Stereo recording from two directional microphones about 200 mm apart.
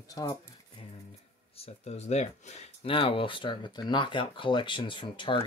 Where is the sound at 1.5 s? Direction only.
30° left (ahead or behind).